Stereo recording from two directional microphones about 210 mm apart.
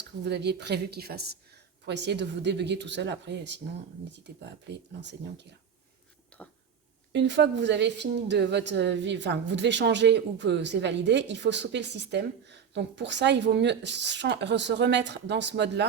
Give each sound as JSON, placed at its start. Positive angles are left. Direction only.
{"t": 0.3, "sound": "a woman's voice", "side_deg": -55}
{"t": 6.3, "sound": "a sound", "side_deg": 5}
{"t": 7.1, "sound": "a woman's voice", "side_deg": -55}